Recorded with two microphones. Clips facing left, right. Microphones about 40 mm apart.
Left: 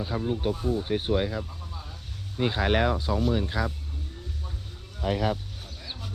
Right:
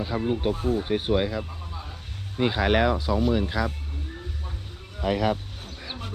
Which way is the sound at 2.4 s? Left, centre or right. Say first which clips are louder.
Right 3 dB; right.